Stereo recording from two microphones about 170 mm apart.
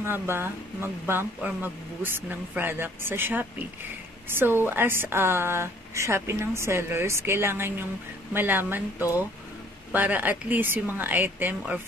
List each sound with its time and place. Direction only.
0.0 s speech: 15° right (ahead or behind)
9.9 s speech: 10° right (ahead or behind)